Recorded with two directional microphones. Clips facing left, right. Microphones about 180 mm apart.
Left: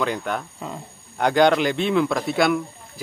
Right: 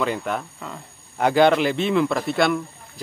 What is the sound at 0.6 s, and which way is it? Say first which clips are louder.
Speech: left 3 dB; 20° left (ahead or behind).